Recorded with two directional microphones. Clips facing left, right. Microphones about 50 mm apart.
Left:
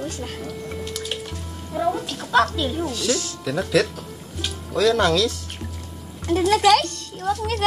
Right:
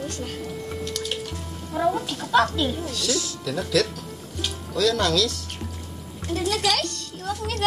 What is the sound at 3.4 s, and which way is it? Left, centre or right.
Speech, centre.